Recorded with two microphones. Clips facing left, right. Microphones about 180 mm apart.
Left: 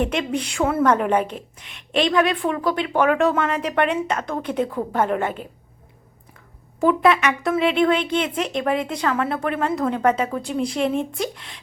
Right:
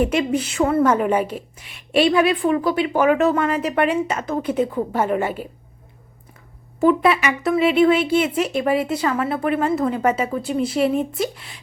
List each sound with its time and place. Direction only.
0.0 s a woman's voice: 5° right (ahead or behind)
6.7 s a woman's voice: centre (ahead or behind)